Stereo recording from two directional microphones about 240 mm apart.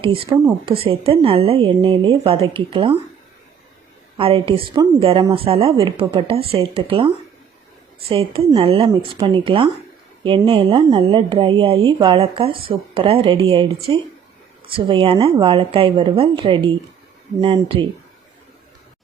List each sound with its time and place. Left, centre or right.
0.0 s speech: right
4.2 s speech: right
8.1 s speech: right